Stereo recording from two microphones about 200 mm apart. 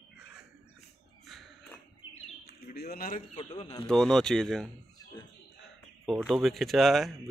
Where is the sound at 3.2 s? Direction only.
30° left (ahead or behind).